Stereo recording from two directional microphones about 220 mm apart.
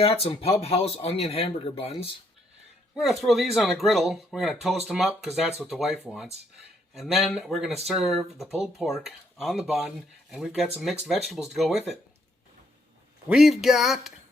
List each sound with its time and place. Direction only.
0.0 s speech: 25° left (ahead or behind)
2.9 s speech: centre (ahead or behind)
13.2 s speech: 5° right (ahead or behind)